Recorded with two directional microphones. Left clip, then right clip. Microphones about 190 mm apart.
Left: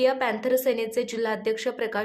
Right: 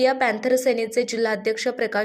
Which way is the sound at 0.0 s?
15° right (ahead or behind).